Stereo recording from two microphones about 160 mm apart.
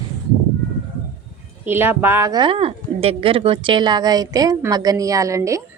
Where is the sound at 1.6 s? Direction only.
15° right (ahead or behind).